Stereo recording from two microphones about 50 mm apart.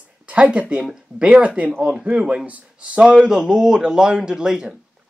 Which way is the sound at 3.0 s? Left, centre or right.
Centre.